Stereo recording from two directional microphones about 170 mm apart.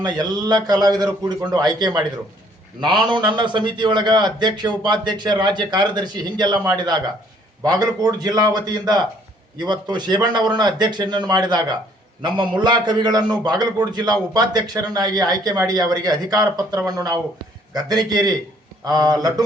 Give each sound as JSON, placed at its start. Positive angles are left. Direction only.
{"t": 0.0, "sound": "a man's voice", "side_deg": -25}